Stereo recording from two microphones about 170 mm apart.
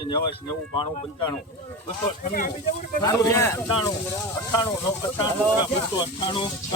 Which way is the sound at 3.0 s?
20° left (ahead or behind).